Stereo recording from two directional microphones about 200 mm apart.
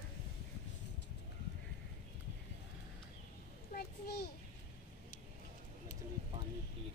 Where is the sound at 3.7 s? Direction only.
55° left (ahead or behind).